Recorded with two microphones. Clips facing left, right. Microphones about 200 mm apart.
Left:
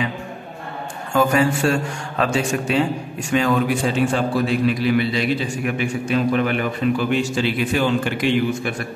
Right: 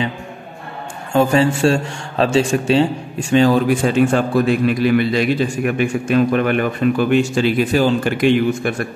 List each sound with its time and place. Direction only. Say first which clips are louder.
1.1 s a man's voice: right 3 dB; 30° right (ahead or behind)
3.8 s a man's voice: right 5 dB; 55° right (ahead or behind)
8.2 s a man's voice: right 5 dB; 50° right (ahead or behind)